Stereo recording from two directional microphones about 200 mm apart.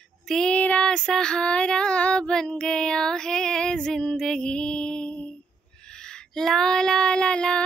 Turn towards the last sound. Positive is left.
turn(degrees=5)  # may be behind; listen again after turning